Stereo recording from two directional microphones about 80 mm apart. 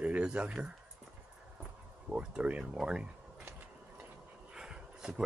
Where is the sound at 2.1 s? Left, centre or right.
Centre.